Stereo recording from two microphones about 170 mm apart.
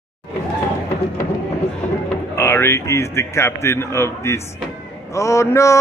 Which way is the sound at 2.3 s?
15° left (ahead or behind).